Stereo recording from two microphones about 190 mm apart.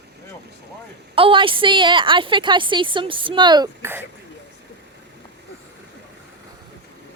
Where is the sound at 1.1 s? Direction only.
30° right (ahead or behind).